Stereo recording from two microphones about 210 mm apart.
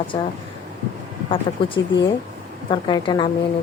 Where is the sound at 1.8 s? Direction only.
20° left (ahead or behind).